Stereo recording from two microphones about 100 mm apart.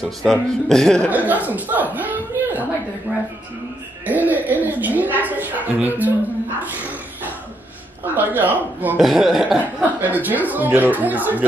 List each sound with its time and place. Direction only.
0.0 s speech: 5° left (ahead or behind)
1.1 s a woman's voice: 15° right (ahead or behind)
8.0 s a woman's voice: 15° right (ahead or behind)
9.0 s speech: 5° right (ahead or behind)
9.9 s a woman's voice: 15° right (ahead or behind)